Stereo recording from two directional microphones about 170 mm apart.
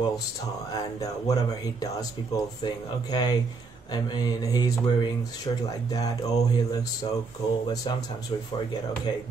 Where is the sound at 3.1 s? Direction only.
25° left (ahead or behind).